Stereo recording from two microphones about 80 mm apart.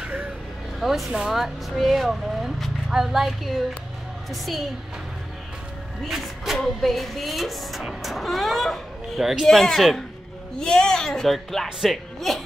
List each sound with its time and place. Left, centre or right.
0.0 s vehicle: centre
0.7 s speech: centre
6.0 s speech: centre